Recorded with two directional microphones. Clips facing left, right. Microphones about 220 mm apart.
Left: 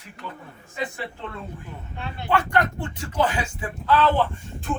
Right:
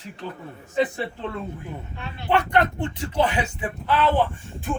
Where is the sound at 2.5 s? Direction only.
20° right (ahead or behind).